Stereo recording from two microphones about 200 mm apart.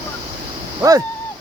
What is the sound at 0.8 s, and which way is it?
Speech, 15° right (ahead or behind).